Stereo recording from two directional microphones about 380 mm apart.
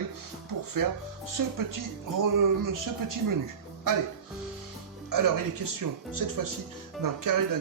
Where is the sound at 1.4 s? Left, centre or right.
Right.